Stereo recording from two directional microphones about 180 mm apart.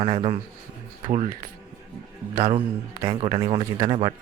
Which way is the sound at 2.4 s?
30° right (ahead or behind).